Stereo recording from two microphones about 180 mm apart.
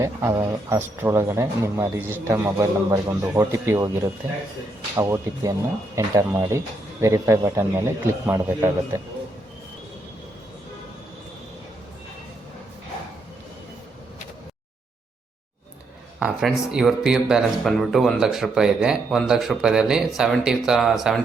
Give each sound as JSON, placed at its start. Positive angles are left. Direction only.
{"t": 0.0, "sound": "speech", "side_deg": -15}
{"t": 16.2, "sound": "speech", "side_deg": -5}